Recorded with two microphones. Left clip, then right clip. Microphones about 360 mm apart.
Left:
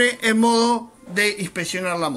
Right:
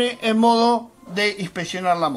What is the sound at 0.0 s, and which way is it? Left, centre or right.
Speech, centre.